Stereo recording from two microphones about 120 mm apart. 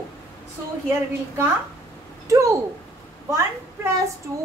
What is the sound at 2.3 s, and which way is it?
A child's voice, 25° right (ahead or behind).